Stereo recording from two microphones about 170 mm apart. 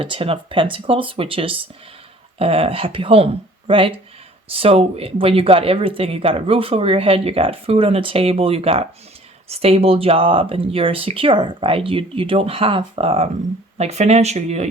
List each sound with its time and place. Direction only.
0.0 s speech: 35° right (ahead or behind)